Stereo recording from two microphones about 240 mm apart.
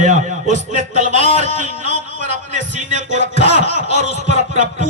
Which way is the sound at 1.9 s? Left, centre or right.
Left.